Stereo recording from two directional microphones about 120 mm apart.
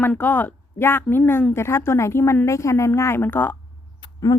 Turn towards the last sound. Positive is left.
turn(degrees=35)  # may be behind; listen again after turning